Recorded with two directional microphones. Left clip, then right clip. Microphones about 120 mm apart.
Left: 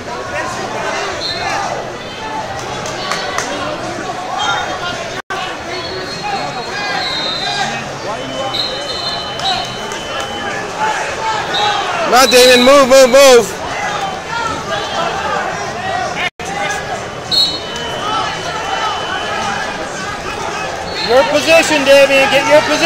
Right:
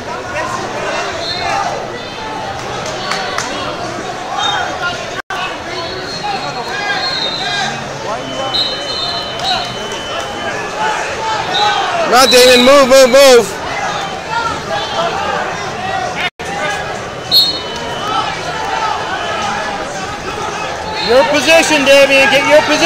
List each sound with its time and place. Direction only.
12.1 s a man's voice: centre (ahead or behind)
21.1 s speech: 45° right (ahead or behind)